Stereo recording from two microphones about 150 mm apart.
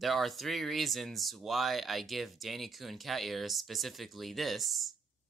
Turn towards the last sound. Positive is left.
turn(degrees=0)  # may be behind; listen again after turning